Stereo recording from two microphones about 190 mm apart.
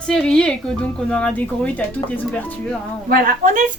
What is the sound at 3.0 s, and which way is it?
Speech, 50° right (ahead or behind).